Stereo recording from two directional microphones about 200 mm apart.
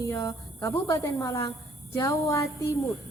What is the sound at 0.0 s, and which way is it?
A woman's voice, 15° left (ahead or behind).